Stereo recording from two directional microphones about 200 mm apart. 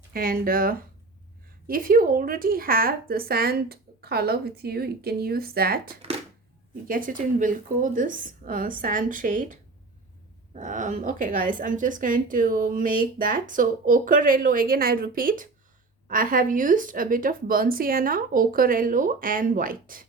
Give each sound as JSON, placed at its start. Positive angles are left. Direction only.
{"t": 0.1, "sound": "a woman's voice", "side_deg": -45}